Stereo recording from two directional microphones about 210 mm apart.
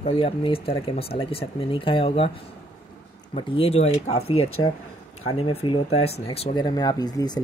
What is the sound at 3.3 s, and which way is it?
Speech, 25° left (ahead or behind).